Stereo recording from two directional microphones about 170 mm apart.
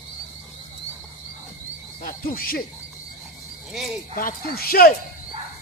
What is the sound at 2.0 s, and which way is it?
Frog, 60° left (ahead or behind).